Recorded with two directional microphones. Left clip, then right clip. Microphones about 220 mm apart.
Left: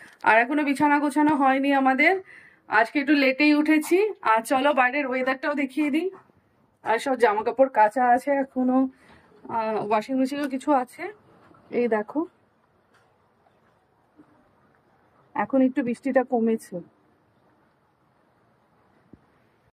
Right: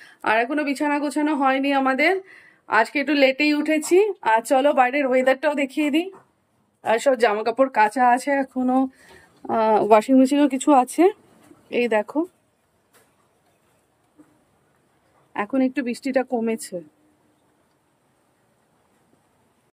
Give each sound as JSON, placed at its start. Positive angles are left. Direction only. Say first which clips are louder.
{"t": 0.2, "sound": "speech", "louder": "left 1 dB", "side_deg": -10}
{"t": 15.3, "sound": "speech", "louder": "even", "side_deg": 0}